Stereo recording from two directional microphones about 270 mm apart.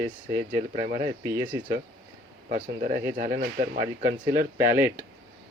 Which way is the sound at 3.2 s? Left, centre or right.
Right.